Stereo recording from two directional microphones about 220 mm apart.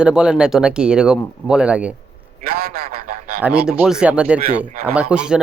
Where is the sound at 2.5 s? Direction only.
45° right (ahead or behind).